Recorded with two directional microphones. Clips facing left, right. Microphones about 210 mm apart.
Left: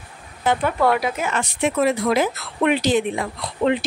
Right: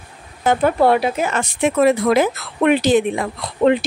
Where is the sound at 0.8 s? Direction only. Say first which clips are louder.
Right 4 dB; 30° right (ahead or behind).